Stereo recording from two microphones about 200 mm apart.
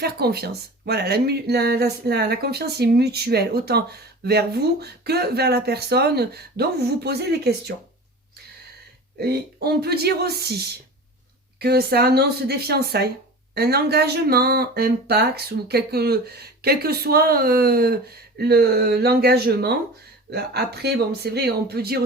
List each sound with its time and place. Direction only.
0.0 s speech: 50° right (ahead or behind)
9.1 s speech: 50° right (ahead or behind)